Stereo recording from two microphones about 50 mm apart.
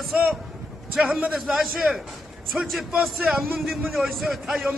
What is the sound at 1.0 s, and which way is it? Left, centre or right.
Speech, right.